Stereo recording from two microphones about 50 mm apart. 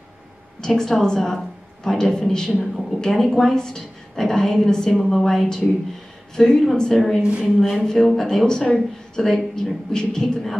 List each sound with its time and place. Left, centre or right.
0.6 s a woman's voice: centre
7.2 s a woman's voice: right
7.4 s speech: centre
7.8 s a woman's voice: centre